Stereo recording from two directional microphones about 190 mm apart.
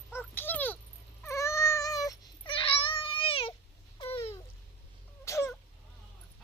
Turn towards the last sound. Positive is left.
turn(degrees=15)  # may be behind; listen again after turning